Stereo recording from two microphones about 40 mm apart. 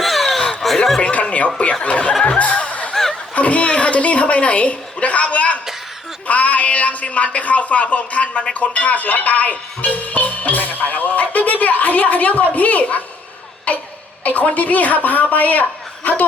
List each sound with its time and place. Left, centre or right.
0.0 s snicker: centre
1.1 s chuckle: left
1.8 s speech: left
2.4 s music: left
2.9 s snicker: centre
3.3 s speech: left
13.7 s a sound: left
14.3 s speech: left